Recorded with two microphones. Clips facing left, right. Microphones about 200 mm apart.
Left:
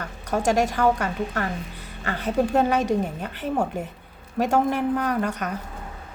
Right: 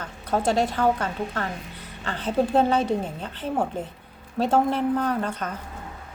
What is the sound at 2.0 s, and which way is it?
A woman's voice, 10° left (ahead or behind).